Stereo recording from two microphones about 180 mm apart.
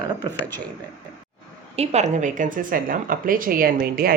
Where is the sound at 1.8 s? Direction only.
40° right (ahead or behind).